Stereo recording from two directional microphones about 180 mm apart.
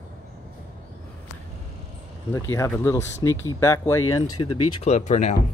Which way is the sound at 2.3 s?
15° left (ahead or behind).